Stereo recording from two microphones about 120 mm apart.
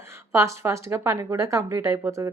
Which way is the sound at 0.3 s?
25° right (ahead or behind).